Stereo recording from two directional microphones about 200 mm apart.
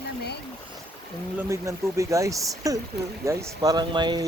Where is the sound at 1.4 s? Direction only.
15° right (ahead or behind).